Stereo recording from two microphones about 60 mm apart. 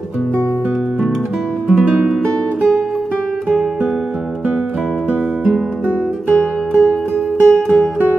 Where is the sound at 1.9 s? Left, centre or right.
Centre.